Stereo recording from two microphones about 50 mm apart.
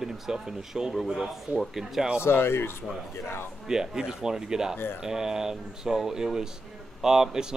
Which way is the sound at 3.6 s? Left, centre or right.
Centre.